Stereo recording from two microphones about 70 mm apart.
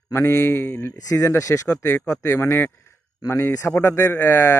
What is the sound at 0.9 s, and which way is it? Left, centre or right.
A man's voice, left.